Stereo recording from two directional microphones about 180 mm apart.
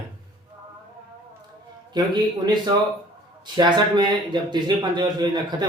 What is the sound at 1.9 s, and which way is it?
Speech, 25° right (ahead or behind).